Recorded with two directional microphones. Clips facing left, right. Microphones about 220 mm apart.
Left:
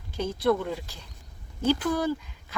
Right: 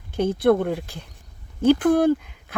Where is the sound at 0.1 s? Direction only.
55° right (ahead or behind).